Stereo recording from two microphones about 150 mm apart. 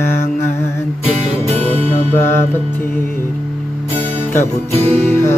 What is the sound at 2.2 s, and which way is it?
Music, 15° left (ahead or behind).